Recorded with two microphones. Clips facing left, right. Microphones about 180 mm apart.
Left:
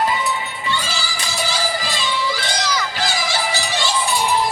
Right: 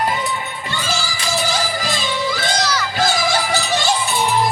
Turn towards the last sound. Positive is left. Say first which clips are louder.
# right 4 dB
turn(degrees=-50)  # may be behind; listen again after turning